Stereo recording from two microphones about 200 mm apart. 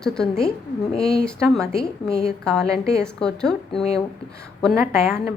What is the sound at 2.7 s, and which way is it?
Speech, 15° right (ahead or behind).